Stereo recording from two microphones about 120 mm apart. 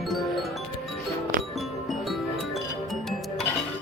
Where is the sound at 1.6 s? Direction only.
Centre (ahead or behind).